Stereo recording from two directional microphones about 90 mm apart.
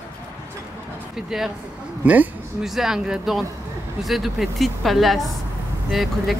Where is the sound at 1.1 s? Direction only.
5° right (ahead or behind).